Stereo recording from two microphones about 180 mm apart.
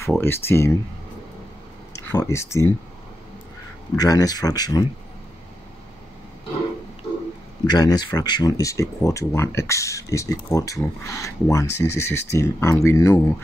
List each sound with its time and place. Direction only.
0.2 s speech: 15° left (ahead or behind)
2.0 s speech: 15° left (ahead or behind)
3.9 s speech: 20° left (ahead or behind)
7.6 s speech: 25° left (ahead or behind)